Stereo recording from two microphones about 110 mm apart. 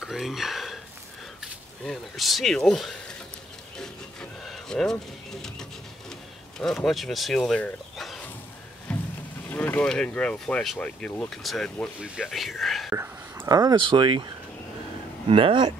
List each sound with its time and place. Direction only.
0.0 s speech: centre (ahead or behind)
3.7 s wood: 5° left (ahead or behind)
5.3 s a sound: 5° left (ahead or behind)
6.6 s speech: 5° left (ahead or behind)
8.9 s a sound: 10° left (ahead or behind)
9.5 s speech: 15° left (ahead or behind)
13.5 s speech: 35° right (ahead or behind)
15.2 s speech: 55° right (ahead or behind)